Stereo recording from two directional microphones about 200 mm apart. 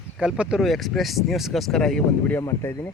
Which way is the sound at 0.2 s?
5° right (ahead or behind).